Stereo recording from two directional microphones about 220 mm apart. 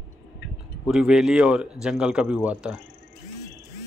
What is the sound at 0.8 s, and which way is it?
Speech, centre (ahead or behind).